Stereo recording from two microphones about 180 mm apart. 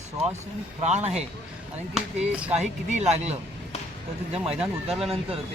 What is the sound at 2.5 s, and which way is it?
Speech, 40° right (ahead or behind).